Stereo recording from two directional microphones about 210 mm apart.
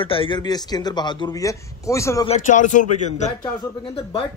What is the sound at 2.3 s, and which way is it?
Speech, 35° left (ahead or behind).